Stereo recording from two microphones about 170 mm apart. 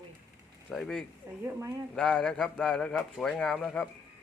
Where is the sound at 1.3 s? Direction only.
15° right (ahead or behind).